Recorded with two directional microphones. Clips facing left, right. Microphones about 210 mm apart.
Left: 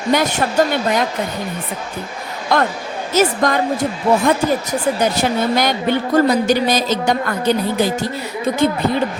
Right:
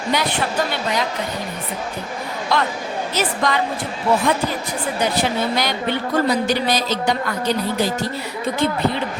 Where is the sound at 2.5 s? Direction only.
50° left (ahead or behind).